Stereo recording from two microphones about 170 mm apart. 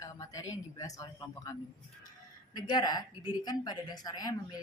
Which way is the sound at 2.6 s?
25° left (ahead or behind).